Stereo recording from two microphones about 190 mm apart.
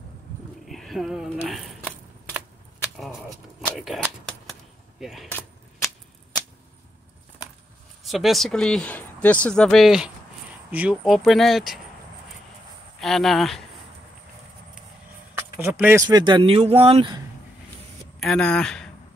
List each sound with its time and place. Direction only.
0.7 s a sound: centre (ahead or behind)
3.2 s speech: centre (ahead or behind)
8.0 s speech: centre (ahead or behind)
13.0 s speech: centre (ahead or behind)
15.3 s a sound: 15° right (ahead or behind)
15.8 s speech: 15° right (ahead or behind)
18.2 s speech: 5° left (ahead or behind)